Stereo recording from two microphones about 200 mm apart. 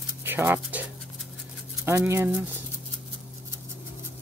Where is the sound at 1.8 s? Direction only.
15° right (ahead or behind).